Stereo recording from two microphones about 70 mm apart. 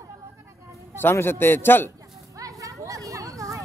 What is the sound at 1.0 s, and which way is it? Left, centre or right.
Speech, left.